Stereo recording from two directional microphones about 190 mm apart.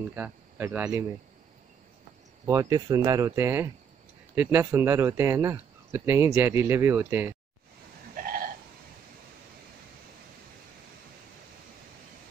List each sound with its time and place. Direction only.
0.1 s speech: 10° right (ahead or behind)
2.4 s speech: 15° right (ahead or behind)
8.2 s hiccup: 50° right (ahead or behind)